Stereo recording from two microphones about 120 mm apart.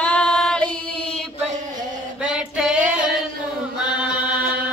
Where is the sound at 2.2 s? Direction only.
5° right (ahead or behind).